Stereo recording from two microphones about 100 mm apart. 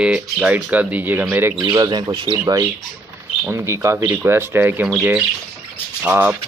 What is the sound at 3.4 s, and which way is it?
Speech, 25° right (ahead or behind).